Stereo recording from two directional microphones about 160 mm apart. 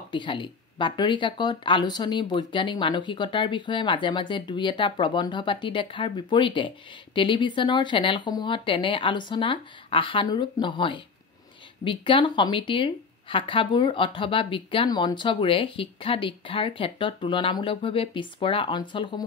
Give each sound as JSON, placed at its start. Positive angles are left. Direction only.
{"t": 0.1, "sound": "speech", "side_deg": 30}